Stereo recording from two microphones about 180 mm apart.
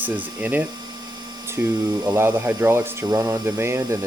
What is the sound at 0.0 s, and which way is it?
Speech, 10° right (ahead or behind).